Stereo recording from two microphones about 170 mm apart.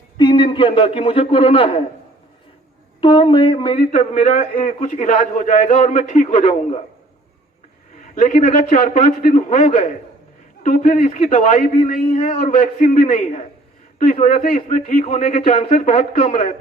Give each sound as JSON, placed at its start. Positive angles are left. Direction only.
{"t": 0.2, "sound": "a man's voice", "side_deg": 25}
{"t": 3.0, "sound": "a man's voice", "side_deg": 30}
{"t": 8.1, "sound": "a man's voice", "side_deg": 45}
{"t": 14.4, "sound": "a man's voice", "side_deg": 50}
{"t": 15.0, "sound": "speech", "side_deg": 35}